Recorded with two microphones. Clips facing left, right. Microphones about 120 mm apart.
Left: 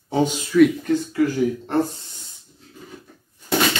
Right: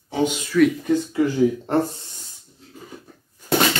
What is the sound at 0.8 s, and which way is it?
Speech, 20° right (ahead or behind).